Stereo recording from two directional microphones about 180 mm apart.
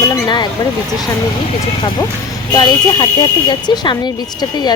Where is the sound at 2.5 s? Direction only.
25° left (ahead or behind).